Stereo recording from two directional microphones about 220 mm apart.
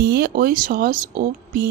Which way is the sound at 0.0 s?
45° right (ahead or behind).